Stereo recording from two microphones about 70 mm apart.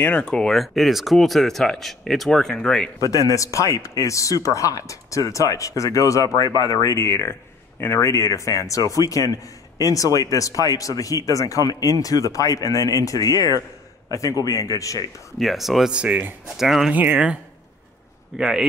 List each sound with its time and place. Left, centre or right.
0.2 s speech: centre
0.6 s speech: centre
3.0 s a man's voice: left
15.3 s speech: centre
15.9 s speech: centre
16.5 s speech: centre
16.9 s speech: right
18.4 s speech: centre